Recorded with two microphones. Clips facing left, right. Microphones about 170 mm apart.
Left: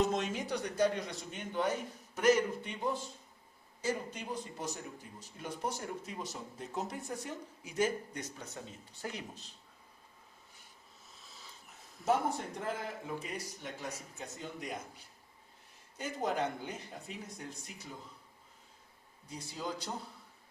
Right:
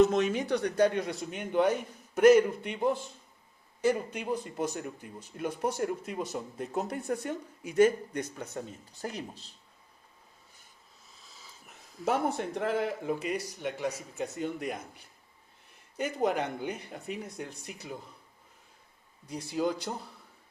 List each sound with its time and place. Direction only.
0.1 s speech: 65° right (ahead or behind)
9.0 s speech: 40° right (ahead or behind)
11.1 s a sound: centre (ahead or behind)
12.5 s speech: 75° right (ahead or behind)
14.3 s speech: 60° right (ahead or behind)
16.0 s speech: 65° right (ahead or behind)
19.3 s speech: 65° right (ahead or behind)